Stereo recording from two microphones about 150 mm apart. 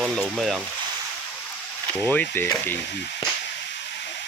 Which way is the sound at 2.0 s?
10° left (ahead or behind).